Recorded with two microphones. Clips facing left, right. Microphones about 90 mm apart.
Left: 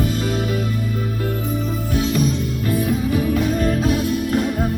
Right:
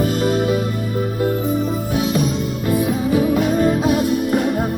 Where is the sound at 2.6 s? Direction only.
15° right (ahead or behind).